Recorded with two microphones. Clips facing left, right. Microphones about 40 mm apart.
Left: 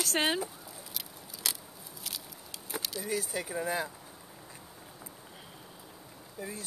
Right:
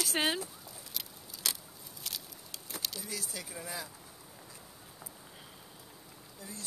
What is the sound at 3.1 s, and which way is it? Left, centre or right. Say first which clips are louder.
Speech: left 8 dB; left.